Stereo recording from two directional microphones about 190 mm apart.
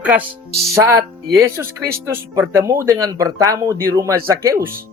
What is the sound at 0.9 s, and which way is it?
Speech, 15° right (ahead or behind).